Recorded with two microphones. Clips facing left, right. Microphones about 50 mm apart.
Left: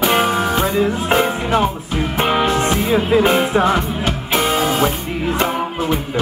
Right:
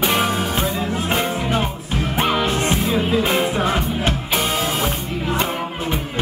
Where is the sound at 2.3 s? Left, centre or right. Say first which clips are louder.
Left 5 dB; left.